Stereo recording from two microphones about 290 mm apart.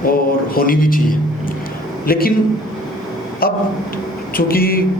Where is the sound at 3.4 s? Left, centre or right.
Left.